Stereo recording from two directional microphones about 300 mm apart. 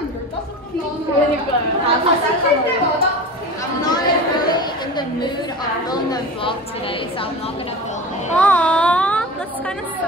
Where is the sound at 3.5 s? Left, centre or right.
Centre.